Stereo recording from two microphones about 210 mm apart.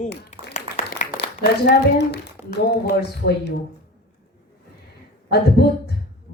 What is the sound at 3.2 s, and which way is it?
Speech, 60° left (ahead or behind).